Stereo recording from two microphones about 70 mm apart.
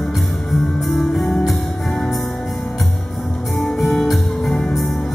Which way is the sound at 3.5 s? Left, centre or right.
Centre.